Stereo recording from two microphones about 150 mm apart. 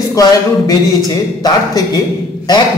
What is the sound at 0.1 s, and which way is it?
Speech, 25° left (ahead or behind).